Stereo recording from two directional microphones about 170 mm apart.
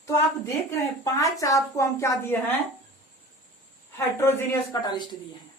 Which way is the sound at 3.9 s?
15° left (ahead or behind).